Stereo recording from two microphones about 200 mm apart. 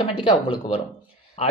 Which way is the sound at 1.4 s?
30° left (ahead or behind).